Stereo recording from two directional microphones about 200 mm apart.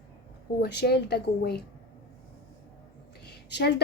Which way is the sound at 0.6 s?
55° left (ahead or behind).